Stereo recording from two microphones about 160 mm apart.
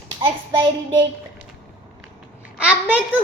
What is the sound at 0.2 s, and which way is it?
Child singing, 30° right (ahead or behind).